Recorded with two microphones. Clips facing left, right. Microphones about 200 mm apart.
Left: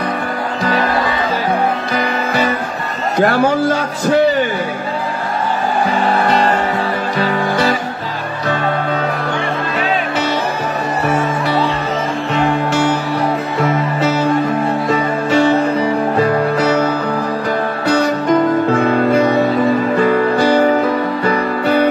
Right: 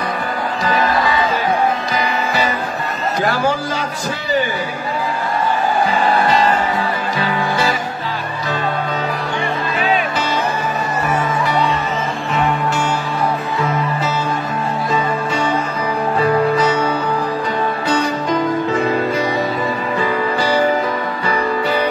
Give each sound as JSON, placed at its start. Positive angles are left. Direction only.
{"t": 2.0, "sound": "music", "side_deg": 55}
{"t": 3.2, "sound": "a man's voice", "side_deg": 60}
{"t": 17.5, "sound": "music", "side_deg": 65}